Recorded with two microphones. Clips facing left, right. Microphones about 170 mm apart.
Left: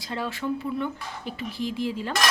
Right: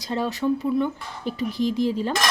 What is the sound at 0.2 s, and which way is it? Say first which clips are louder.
Speech: right 5 dB; 40° right (ahead or behind).